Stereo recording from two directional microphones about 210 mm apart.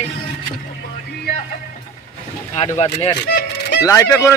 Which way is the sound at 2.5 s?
30° left (ahead or behind).